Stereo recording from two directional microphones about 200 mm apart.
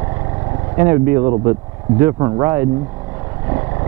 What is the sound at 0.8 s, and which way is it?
Speech, 15° right (ahead or behind).